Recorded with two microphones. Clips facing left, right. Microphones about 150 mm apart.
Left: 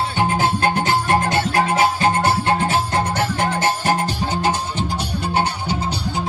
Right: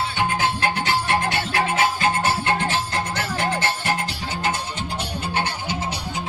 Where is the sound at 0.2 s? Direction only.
45° left (ahead or behind).